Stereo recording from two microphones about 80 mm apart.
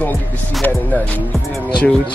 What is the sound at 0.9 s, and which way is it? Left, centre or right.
Music, left.